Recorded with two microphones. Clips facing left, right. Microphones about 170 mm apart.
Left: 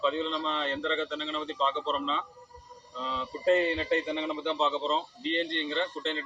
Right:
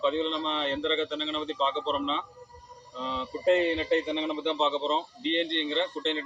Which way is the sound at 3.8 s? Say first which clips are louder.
Right 2 dB; 15° right (ahead or behind).